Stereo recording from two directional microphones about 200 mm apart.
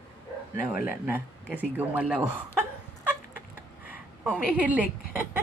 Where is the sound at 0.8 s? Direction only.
10° right (ahead or behind).